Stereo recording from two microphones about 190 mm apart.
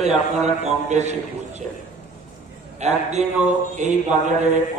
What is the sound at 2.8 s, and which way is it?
A man's voice, 35° right (ahead or behind).